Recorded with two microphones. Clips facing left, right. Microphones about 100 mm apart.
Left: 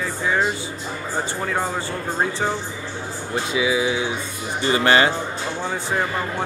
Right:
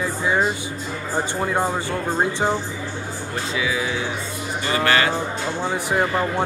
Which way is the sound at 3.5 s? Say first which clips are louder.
Left 4 dB; 15° left (ahead or behind).